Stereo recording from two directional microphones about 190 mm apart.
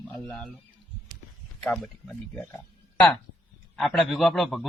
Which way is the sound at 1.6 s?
Centre (ahead or behind).